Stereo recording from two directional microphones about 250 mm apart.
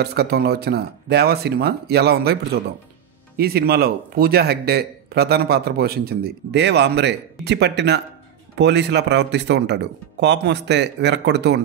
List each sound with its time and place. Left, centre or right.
0.0 s speech: right
3.3 s speech: right